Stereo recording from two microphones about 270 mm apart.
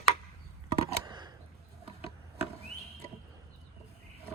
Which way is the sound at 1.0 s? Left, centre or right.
Centre.